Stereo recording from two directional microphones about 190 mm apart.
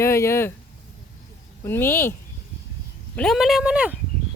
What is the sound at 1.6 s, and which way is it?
Speech, 10° left (ahead or behind).